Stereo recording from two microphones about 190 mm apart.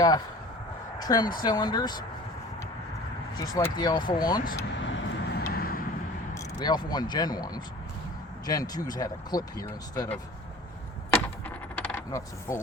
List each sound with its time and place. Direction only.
0.9 s a sound: 20° left (ahead or behind)
1.4 s speech: 20° left (ahead or behind)
3.3 s speech: 20° left (ahead or behind)
4.8 s vehicle: 75° left (ahead or behind)
5.5 s vehicle: 50° left (ahead or behind)
6.3 s speech: 20° left (ahead or behind)
11.1 s coin: 10° left (ahead or behind)